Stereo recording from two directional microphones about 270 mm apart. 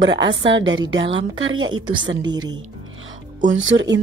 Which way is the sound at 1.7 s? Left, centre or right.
Centre.